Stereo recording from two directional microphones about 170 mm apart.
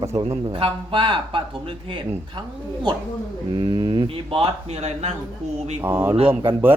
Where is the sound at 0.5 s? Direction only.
30° right (ahead or behind).